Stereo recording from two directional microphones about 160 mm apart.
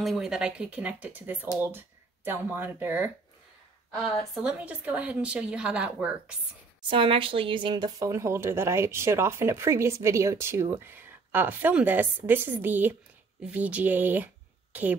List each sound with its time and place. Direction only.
0.0 s speech: centre (ahead or behind)
6.8 s speech: 30° right (ahead or behind); by 15.0 s 10° right (ahead or behind)